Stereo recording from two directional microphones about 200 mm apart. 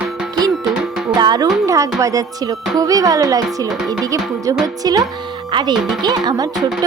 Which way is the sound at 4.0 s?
15° right (ahead or behind).